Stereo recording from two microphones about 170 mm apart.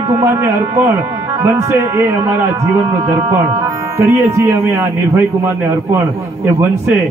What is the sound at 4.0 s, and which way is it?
A man's voice, 15° right (ahead or behind).